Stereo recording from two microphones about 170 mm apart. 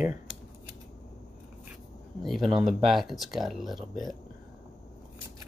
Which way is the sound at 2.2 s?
Centre (ahead or behind).